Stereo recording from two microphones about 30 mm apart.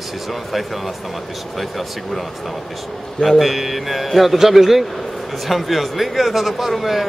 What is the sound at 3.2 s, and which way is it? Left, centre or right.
A man's voice, centre.